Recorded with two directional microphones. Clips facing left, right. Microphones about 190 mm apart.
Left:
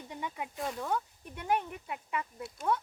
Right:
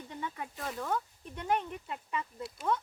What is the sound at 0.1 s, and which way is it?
Snake, 15° left (ahead or behind).